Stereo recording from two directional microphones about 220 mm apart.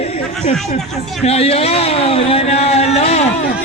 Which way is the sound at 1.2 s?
30° left (ahead or behind).